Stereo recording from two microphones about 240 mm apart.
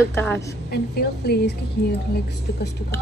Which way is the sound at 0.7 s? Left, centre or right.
Left.